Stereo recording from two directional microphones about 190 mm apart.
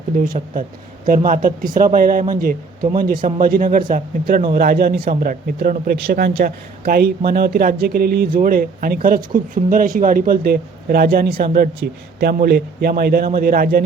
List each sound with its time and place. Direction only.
0.2 s a man's voice: 45° right (ahead or behind)